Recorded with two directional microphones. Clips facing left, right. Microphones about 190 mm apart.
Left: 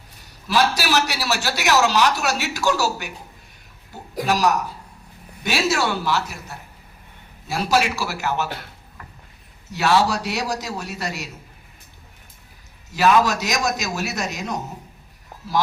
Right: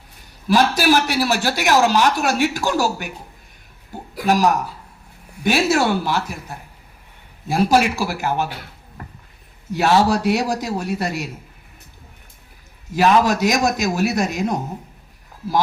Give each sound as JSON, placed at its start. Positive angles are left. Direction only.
{"t": 0.4, "sound": "a man's voice", "side_deg": -50}
{"t": 5.4, "sound": "a man's voice", "side_deg": -50}
{"t": 7.4, "sound": "a man's voice", "side_deg": -50}
{"t": 9.7, "sound": "a man's voice", "side_deg": -50}
{"t": 12.9, "sound": "a man's voice", "side_deg": -50}